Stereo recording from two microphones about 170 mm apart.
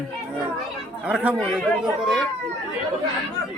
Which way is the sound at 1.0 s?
10° right (ahead or behind).